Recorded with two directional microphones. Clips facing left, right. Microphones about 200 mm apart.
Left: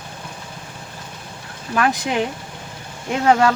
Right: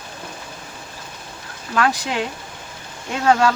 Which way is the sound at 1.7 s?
20° left (ahead or behind).